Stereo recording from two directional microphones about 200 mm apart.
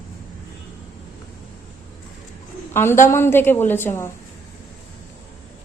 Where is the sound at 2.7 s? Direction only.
10° left (ahead or behind).